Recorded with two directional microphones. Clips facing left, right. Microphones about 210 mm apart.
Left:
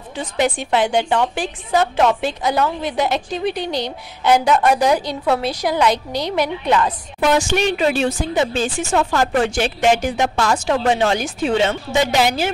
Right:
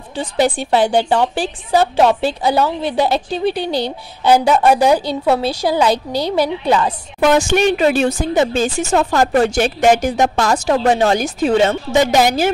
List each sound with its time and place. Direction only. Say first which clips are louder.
0.2 s a woman's voice: right 3 dB; 35° right (ahead or behind)
7.2 s speech: right 4 dB; 45° right (ahead or behind)